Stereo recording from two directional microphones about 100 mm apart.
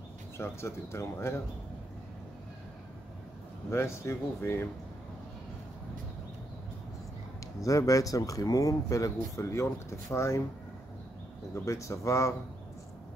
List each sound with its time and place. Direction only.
0.4 s speech: 25° left (ahead or behind)
3.7 s speech: 25° left (ahead or behind)
7.6 s speech: 35° left (ahead or behind)
11.5 s speech: 30° left (ahead or behind)